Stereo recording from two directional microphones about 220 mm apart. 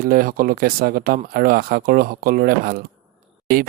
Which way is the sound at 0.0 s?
40° right (ahead or behind).